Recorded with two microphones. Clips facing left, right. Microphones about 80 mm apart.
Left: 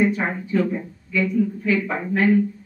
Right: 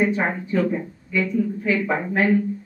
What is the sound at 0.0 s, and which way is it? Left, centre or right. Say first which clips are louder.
Speech: even; centre.